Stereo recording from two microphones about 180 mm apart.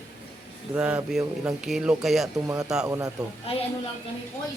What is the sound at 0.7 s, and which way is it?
Speech, 10° right (ahead or behind).